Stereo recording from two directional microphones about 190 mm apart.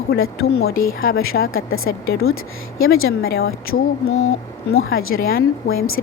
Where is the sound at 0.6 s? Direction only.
90° left.